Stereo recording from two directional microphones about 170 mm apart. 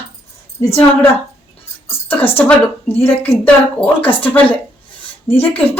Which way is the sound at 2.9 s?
35° left (ahead or behind).